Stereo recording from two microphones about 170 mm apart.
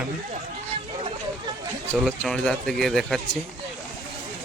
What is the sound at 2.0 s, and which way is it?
Speech, 5° left (ahead or behind).